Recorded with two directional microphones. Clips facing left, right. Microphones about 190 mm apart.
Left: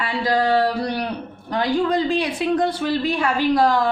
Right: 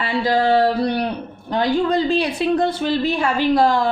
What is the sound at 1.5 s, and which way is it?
Speech, 30° right (ahead or behind).